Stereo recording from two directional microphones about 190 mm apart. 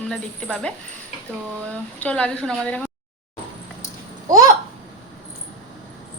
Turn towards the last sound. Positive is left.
turn(degrees=-20)  # may be behind; listen again after turning